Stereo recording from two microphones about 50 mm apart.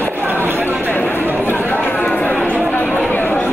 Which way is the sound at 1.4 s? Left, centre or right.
Left.